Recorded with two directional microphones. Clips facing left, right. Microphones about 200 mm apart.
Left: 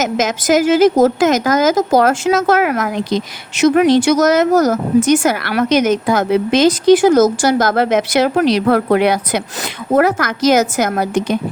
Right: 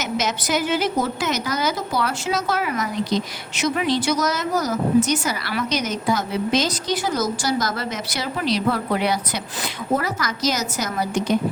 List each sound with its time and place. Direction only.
0.0 s a woman's voice: 90° left
1.7 s a woman's voice: 45° left (ahead or behind)
2.3 s speech: 65° left (ahead or behind)
2.7 s speech: 55° left (ahead or behind)
3.8 s speech: 75° left (ahead or behind)
4.2 s a woman's voice: 90° left
4.5 s a woman's voice: 45° left (ahead or behind); by 7.2 s 80° left
7.4 s speech: 60° left (ahead or behind)